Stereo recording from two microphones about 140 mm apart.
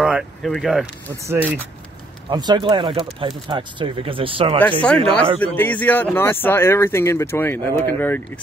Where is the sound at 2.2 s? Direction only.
30° right (ahead or behind).